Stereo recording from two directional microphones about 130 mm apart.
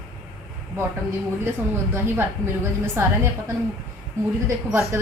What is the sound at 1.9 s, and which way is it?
A woman's voice, 15° right (ahead or behind).